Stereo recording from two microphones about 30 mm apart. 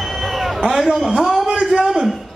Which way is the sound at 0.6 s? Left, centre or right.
Centre.